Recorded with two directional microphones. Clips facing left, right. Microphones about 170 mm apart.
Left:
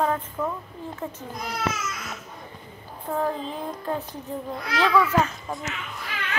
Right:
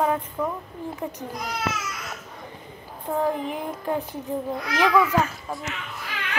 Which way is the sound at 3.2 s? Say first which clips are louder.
Right 3 dB; 15° right (ahead or behind).